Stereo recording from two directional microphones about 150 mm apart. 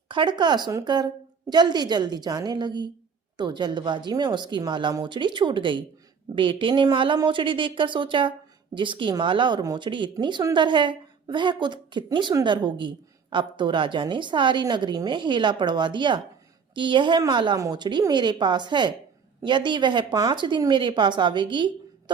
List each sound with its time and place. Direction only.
0.1 s a woman's voice: 30° right (ahead or behind)